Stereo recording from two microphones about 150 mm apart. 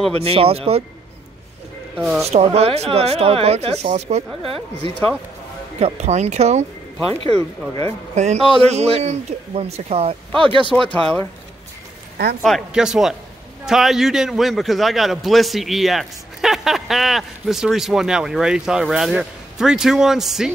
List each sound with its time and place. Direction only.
0.2 s speech: 40° right (ahead or behind)
2.0 s a man's voice: centre (ahead or behind)
2.2 s a man's voice: 45° right (ahead or behind)
5.8 s a man's voice: 45° right (ahead or behind)
7.7 s a man's voice: 45° right (ahead or behind)
10.7 s speech: 5° left (ahead or behind)
12.4 s a man's voice: centre (ahead or behind)